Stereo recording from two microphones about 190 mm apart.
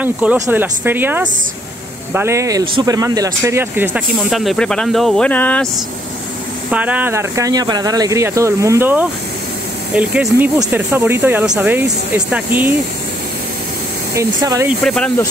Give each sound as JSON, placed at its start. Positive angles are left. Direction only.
{"t": 0.0, "sound": "speech", "side_deg": -10}
{"t": 6.7, "sound": "speech", "side_deg": -10}
{"t": 14.1, "sound": "speech", "side_deg": -15}
{"t": 14.8, "sound": "speech", "side_deg": 5}